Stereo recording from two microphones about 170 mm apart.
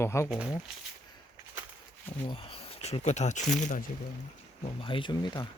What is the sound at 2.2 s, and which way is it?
Speech, 30° left (ahead or behind).